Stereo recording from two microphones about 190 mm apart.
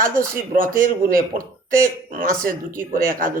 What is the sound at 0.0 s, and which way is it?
Speech, 45° right (ahead or behind).